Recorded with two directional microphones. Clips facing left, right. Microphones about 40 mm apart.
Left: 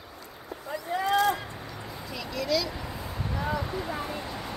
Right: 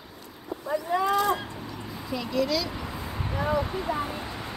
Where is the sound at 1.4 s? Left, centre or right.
Centre.